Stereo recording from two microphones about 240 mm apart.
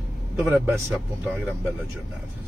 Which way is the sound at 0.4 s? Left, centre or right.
Centre.